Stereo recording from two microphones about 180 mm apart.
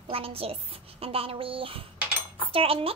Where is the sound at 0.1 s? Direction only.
30° right (ahead or behind).